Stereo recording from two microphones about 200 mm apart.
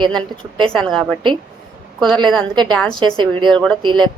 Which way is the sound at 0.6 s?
5° left (ahead or behind).